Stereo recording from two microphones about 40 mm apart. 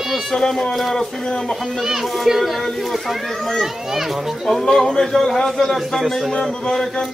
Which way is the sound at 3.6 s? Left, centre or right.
Centre.